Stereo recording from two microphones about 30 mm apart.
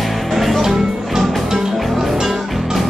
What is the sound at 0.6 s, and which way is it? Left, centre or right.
Music, centre.